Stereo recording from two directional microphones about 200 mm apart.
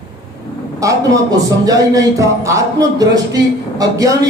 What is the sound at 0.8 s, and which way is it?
Speech, 15° right (ahead or behind).